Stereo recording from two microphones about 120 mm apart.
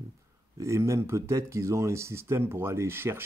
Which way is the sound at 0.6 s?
25° right (ahead or behind).